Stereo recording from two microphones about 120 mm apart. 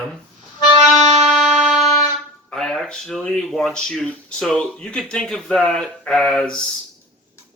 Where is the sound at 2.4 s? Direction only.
5° left (ahead or behind).